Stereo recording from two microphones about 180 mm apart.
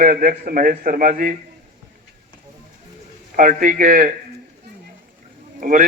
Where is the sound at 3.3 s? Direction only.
45° right (ahead or behind).